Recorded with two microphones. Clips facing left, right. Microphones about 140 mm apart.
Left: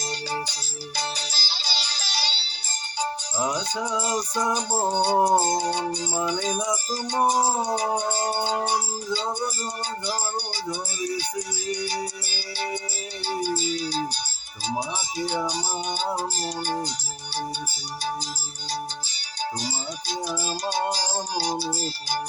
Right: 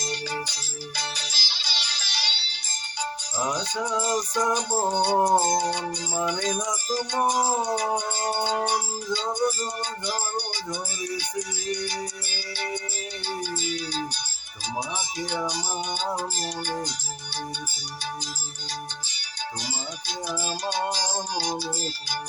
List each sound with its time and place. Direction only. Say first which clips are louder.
0.0 s music: left 1 dB; 30° left (ahead or behind)
3.3 s music: even; 5° left (ahead or behind)
4.9 s music: left 1 dB; 30° left (ahead or behind)
5.1 s music: left 1 dB; 10° left (ahead or behind)
5.4 s music: even; 30° left (ahead or behind)
10.1 s music: even; 35° left (ahead or behind)
13.2 s music: left 5 dB; 35° left (ahead or behind)
19.6 s music: left 3 dB; 35° left (ahead or behind)